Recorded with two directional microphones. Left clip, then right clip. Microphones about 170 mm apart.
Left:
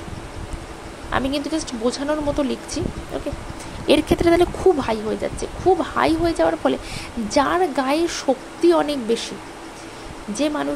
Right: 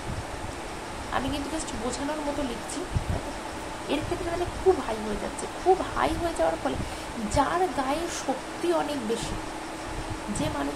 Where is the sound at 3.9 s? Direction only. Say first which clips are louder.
Left 13 dB; 65° left (ahead or behind).